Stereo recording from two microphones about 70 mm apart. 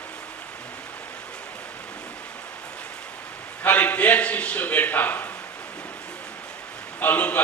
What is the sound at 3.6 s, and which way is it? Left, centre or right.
A man's voice, left.